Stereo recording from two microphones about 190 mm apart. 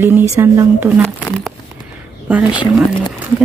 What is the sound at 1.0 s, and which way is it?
Crumpling, 5° left (ahead or behind).